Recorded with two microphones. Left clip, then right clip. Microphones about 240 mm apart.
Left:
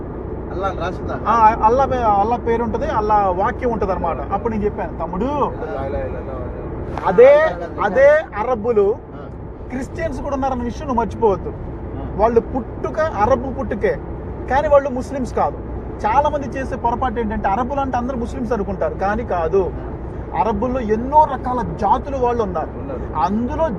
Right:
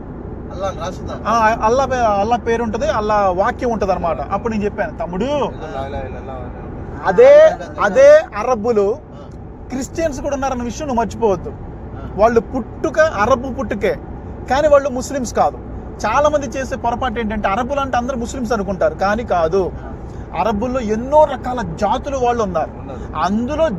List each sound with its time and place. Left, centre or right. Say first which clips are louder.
1.2 s speech: left 1 dB; right
7.0 s speech: right 3 dB; right